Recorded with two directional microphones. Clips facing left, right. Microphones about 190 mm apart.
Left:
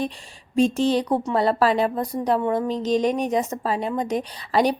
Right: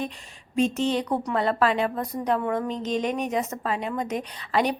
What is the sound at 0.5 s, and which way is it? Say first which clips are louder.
Speech: left 4 dB; 35° left (ahead or behind).